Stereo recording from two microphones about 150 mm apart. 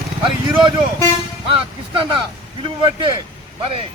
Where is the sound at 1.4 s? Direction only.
35° right (ahead or behind).